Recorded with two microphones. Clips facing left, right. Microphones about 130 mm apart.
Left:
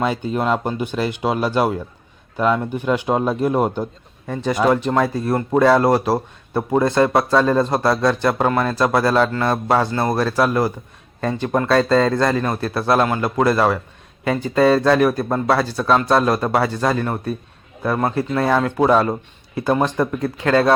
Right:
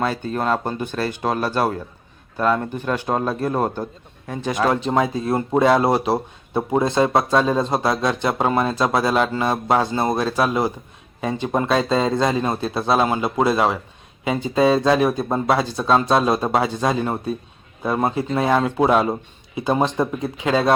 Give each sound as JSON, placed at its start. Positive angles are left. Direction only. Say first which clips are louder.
{"t": 0.0, "sound": "speech", "louder": "left 2 dB", "side_deg": 15}
{"t": 4.7, "sound": "a man's voice", "louder": "left 2 dB", "side_deg": -20}
{"t": 19.5, "sound": "a man's voice", "louder": "left 1 dB", "side_deg": -20}